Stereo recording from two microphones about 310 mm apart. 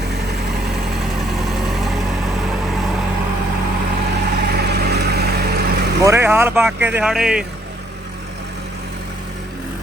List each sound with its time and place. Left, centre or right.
1.5 s vehicle: centre
4.4 s vehicle: right
6.0 s speech: centre